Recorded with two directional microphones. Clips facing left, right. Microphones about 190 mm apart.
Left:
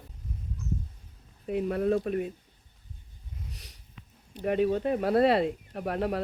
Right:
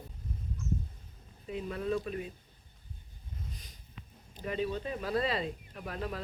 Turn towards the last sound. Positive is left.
turn(degrees=65)  # may be behind; listen again after turning